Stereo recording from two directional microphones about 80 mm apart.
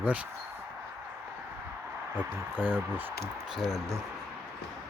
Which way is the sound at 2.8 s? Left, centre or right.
Right.